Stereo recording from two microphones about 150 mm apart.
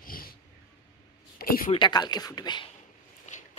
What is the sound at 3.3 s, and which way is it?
Walk, 55° left (ahead or behind).